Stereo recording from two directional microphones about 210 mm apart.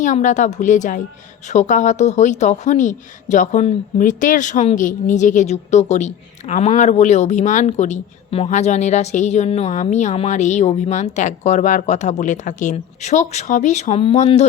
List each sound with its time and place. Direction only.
0.0 s a woman's voice: 35° left (ahead or behind)